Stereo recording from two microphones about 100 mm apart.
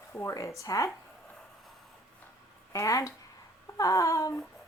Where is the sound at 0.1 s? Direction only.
30° left (ahead or behind).